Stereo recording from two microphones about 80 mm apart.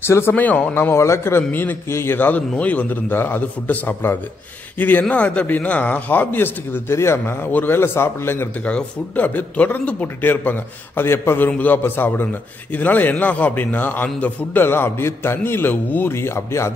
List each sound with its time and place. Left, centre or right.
0.0 s speech: left
0.3 s a man's voice: centre
8.6 s a man's voice: centre; by 16.7 s left